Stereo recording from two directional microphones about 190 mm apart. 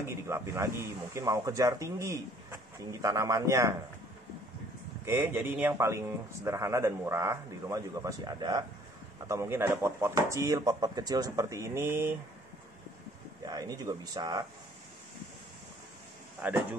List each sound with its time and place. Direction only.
0.0 s speech: 15° right (ahead or behind)
5.0 s speech: 10° right (ahead or behind)
13.5 s speech: 20° right (ahead or behind)
16.4 s speech: 5° right (ahead or behind)